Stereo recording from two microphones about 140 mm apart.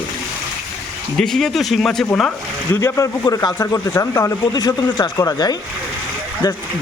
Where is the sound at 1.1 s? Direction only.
5° left (ahead or behind).